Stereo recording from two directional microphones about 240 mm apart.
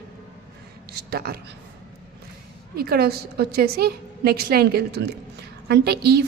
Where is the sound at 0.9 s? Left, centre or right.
Right.